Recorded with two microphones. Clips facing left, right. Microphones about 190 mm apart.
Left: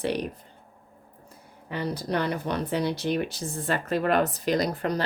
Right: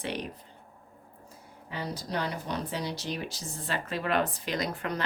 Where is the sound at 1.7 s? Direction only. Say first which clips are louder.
Left 6 dB; 60° left (ahead or behind).